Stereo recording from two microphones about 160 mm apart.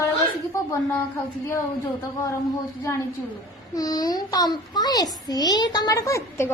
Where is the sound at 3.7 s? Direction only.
25° left (ahead or behind).